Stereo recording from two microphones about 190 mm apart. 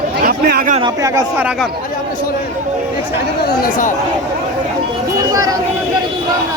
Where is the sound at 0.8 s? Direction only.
20° right (ahead or behind).